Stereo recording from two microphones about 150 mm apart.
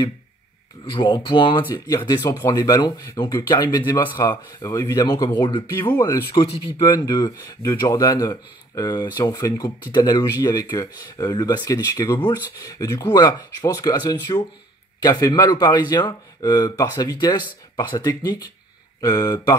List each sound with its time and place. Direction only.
0.8 s speech: 35° left (ahead or behind)
5.9 s speech: 15° left (ahead or behind)